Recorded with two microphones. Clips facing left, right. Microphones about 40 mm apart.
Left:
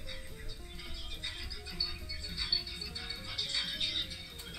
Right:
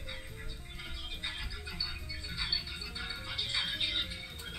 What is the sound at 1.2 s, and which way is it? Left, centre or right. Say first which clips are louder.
Music: right 3 dB; right.